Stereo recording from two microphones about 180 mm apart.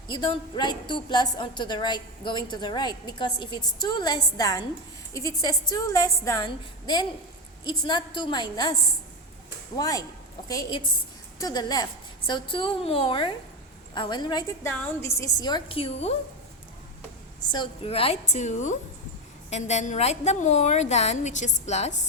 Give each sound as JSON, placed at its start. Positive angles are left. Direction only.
{"t": 0.1, "sound": "a woman's voice", "side_deg": 25}
{"t": 9.7, "sound": "a woman's voice", "side_deg": 20}
{"t": 17.5, "sound": "a woman's voice", "side_deg": 30}